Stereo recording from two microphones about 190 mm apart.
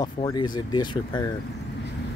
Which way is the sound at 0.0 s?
20° left (ahead or behind).